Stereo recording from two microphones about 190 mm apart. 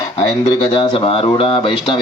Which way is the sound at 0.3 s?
20° left (ahead or behind).